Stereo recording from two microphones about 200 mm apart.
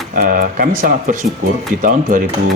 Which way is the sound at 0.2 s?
45° right (ahead or behind).